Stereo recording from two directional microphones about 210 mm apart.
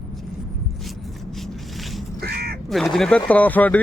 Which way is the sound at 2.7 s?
Centre (ahead or behind).